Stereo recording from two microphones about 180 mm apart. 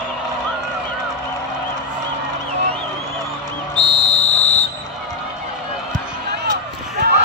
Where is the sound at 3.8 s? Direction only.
25° right (ahead or behind).